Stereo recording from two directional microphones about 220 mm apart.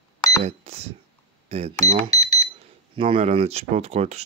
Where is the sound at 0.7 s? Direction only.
30° right (ahead or behind).